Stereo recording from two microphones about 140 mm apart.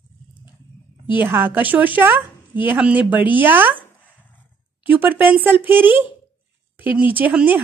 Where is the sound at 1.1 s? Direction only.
15° right (ahead or behind).